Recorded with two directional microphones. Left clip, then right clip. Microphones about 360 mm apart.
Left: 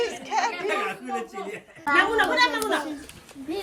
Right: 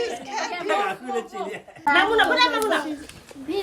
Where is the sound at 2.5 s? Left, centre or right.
Centre.